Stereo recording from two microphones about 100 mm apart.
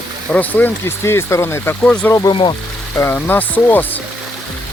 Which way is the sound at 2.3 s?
55° left (ahead or behind).